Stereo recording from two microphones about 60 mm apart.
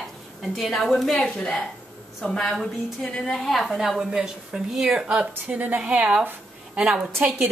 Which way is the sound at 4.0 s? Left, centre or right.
Centre.